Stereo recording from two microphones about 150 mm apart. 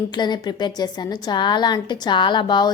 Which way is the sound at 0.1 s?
30° left (ahead or behind).